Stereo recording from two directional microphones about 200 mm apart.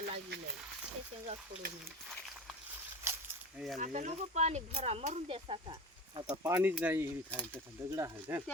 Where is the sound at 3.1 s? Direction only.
15° right (ahead or behind).